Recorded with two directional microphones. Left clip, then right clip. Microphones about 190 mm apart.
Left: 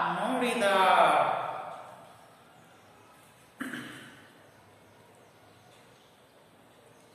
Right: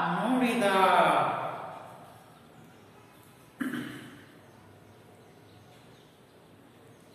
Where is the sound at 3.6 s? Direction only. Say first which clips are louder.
Right 3 dB; centre (ahead or behind).